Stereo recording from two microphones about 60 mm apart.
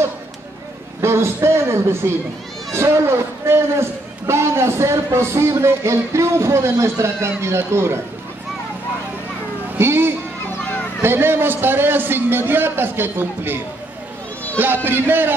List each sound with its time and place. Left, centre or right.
1.0 s a man's voice: right
9.8 s a man's voice: right
14.6 s a man's voice: right